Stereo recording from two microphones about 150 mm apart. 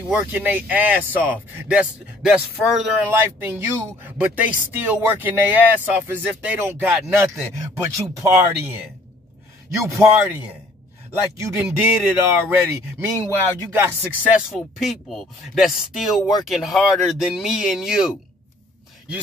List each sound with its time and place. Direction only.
0.1 s speech: 10° right (ahead or behind)
11.4 s speech: 15° right (ahead or behind)
13.7 s speech: 10° right (ahead or behind)